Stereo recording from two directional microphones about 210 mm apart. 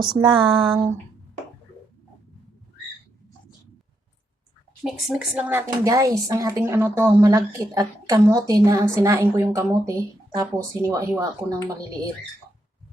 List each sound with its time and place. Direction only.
0.2 s speech: 25° right (ahead or behind)
4.8 s a woman's voice: centre (ahead or behind); by 11.9 s 15° right (ahead or behind)